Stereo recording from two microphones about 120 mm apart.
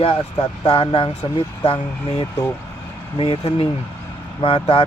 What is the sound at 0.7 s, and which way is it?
Speech, 45° left (ahead or behind).